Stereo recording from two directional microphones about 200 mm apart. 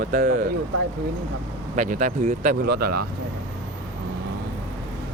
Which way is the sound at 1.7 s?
40° right (ahead or behind).